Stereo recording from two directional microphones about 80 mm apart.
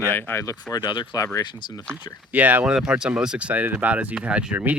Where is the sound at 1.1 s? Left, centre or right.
Left.